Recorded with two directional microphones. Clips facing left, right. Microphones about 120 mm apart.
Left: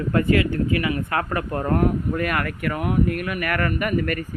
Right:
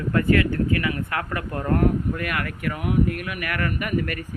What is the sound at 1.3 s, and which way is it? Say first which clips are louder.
Speech: even; 30° left (ahead or behind).